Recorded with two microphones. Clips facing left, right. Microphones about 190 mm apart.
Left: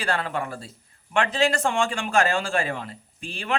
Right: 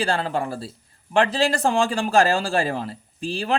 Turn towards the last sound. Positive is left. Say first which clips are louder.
# right 5 dB
turn(degrees=-35)  # may be behind; listen again after turning